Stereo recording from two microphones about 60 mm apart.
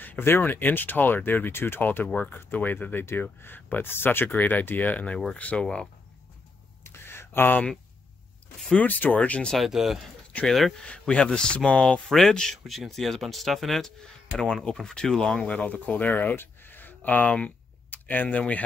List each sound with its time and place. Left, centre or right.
0.2 s speech: left
1.8 s speech: left
6.8 s a sound: left
8.7 s speech: left
9.5 s speech: centre
10.8 s speech: centre
12.1 s speech: centre; by 18.4 s left